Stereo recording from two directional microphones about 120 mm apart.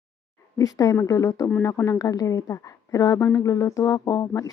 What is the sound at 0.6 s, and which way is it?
Speech, 30° left (ahead or behind).